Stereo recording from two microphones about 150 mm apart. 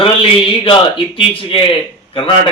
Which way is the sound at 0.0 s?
35° left (ahead or behind).